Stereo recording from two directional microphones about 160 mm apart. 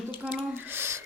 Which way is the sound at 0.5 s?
15° right (ahead or behind).